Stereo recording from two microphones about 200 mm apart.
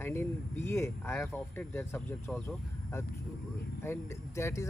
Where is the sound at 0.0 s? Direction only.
10° left (ahead or behind).